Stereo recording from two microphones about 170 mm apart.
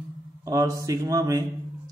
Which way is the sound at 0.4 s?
20° right (ahead or behind).